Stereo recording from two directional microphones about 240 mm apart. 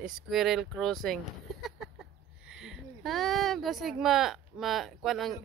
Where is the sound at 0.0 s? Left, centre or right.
Centre.